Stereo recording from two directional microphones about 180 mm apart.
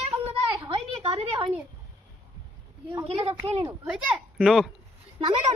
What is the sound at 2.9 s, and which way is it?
Speech, 30° right (ahead or behind).